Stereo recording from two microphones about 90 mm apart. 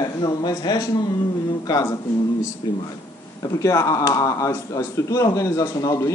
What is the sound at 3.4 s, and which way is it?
Speech, 35° left (ahead or behind).